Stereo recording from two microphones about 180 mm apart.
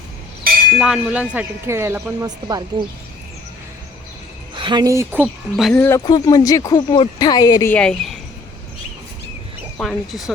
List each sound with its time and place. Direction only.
0.8 s speech: 5° right (ahead or behind); by 2.6 s 20° right (ahead or behind)
4.5 s speech: 25° right (ahead or behind); by 5.7 s 5° right (ahead or behind)
5.7 s speech: 15° left (ahead or behind)
7.7 s speech: 5° left (ahead or behind)
9.8 s speech: centre (ahead or behind)